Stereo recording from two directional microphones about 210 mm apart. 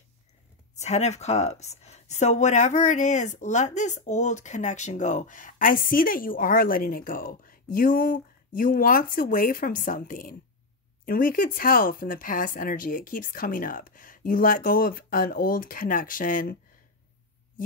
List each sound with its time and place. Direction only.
0.7 s speech: 30° left (ahead or behind)